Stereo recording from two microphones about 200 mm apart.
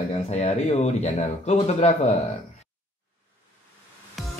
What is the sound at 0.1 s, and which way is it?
Speech, 35° left (ahead or behind).